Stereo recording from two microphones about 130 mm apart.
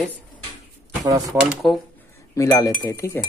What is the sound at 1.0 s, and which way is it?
Speech, 25° right (ahead or behind).